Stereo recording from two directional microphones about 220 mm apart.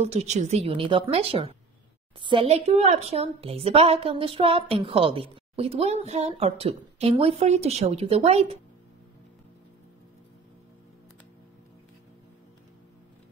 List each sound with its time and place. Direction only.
0.0 s a woman's voice: 30° right (ahead or behind)